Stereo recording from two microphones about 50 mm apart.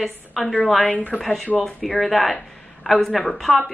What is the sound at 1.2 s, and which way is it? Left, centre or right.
A woman's voice, centre.